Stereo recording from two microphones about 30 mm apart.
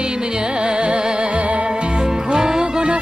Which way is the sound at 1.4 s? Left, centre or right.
Right.